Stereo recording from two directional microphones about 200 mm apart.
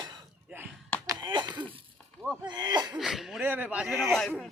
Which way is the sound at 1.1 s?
20° right (ahead or behind).